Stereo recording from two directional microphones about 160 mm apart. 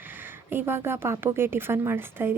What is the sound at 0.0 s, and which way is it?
Speech, 15° right (ahead or behind).